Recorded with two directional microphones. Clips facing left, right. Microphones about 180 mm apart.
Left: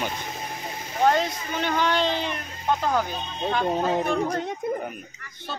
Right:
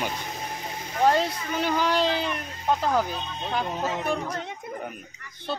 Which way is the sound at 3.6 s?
35° left (ahead or behind).